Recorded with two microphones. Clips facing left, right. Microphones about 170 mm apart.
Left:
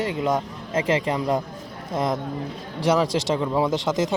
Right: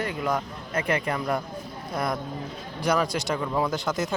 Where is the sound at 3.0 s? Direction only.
90° left.